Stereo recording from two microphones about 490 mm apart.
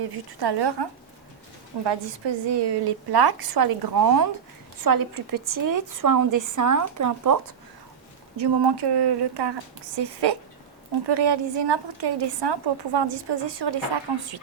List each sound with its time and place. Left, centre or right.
0.3 s a woman's voice: right
8.4 s a woman's voice: right